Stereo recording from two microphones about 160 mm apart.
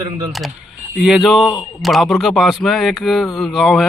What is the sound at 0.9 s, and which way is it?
A man's voice, centre (ahead or behind).